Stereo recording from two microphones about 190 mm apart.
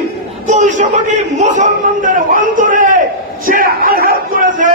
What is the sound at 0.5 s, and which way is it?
A man's voice, 40° right (ahead or behind).